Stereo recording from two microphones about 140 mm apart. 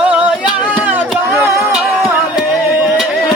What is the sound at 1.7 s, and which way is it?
Music, 5° right (ahead or behind).